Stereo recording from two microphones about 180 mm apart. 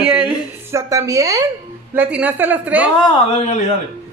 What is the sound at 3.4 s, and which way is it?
Speech, 40° left (ahead or behind).